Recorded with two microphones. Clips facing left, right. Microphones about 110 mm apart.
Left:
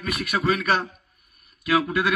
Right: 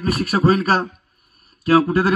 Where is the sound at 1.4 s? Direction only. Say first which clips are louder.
Right 7 dB; 35° right (ahead or behind).